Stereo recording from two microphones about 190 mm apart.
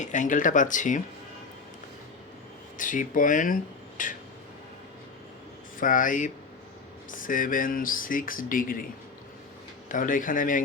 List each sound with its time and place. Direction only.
0.0 s speech: 40° left (ahead or behind)
2.7 s speech: 45° left (ahead or behind)
5.8 s speech: 45° left (ahead or behind)
9.9 s speech: 45° left (ahead or behind)